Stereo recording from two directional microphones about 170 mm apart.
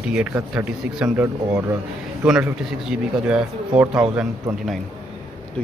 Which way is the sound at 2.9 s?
5° right (ahead or behind).